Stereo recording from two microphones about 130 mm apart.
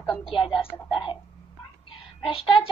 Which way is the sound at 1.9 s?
45° left (ahead or behind).